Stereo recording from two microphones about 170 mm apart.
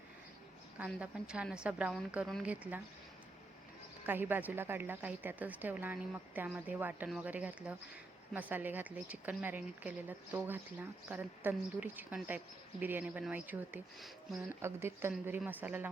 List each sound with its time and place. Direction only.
0.9 s speech: 5° right (ahead or behind)
4.0 s speech: 10° right (ahead or behind)